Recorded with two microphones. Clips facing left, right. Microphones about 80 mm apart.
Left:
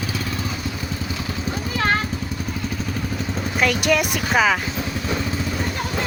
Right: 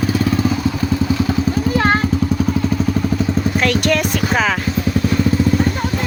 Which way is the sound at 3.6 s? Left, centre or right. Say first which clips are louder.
Even; centre.